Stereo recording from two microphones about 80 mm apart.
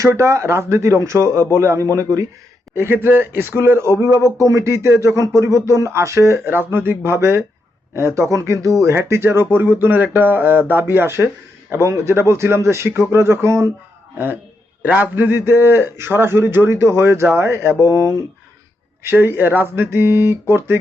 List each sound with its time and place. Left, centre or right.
0.0 s speech: right
2.7 s speech: right
14.8 s speech: right
19.0 s speech: right